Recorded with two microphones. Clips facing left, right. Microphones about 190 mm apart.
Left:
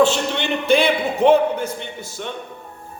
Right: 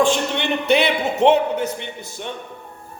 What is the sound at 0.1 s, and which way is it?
Speech, 60° right (ahead or behind).